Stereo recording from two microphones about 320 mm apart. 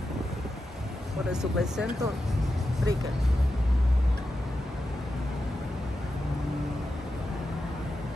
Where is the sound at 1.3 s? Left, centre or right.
Centre.